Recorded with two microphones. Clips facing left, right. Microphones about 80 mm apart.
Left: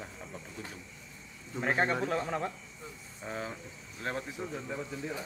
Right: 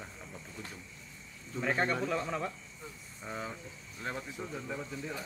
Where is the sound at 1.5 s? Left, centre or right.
Left.